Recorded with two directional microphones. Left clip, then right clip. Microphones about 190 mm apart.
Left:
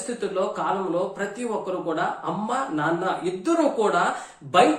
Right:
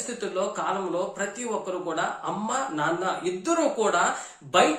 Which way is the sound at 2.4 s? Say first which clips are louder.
Left 2 dB; 10° right (ahead or behind).